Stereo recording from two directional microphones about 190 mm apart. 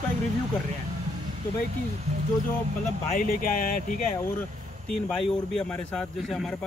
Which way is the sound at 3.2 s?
45° left (ahead or behind).